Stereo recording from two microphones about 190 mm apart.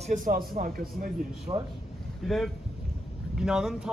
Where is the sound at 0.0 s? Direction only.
45° right (ahead or behind).